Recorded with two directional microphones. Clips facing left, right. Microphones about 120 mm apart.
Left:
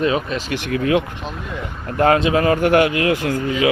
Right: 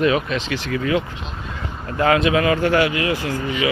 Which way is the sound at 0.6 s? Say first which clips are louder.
Left 4 dB; 55° left (ahead or behind).